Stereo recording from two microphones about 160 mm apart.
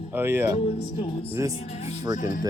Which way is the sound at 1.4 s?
20° right (ahead or behind).